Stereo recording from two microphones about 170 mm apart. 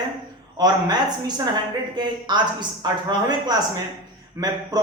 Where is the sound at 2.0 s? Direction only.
25° right (ahead or behind).